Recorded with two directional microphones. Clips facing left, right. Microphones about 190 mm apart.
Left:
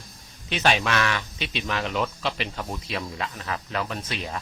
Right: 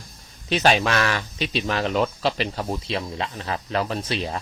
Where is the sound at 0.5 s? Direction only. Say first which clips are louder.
Right 4 dB; 40° right (ahead or behind).